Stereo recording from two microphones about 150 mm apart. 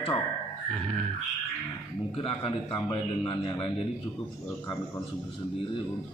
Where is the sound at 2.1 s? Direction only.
35° left (ahead or behind).